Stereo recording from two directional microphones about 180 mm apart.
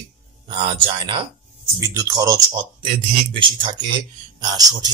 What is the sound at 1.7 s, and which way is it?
A man's voice, 20° right (ahead or behind).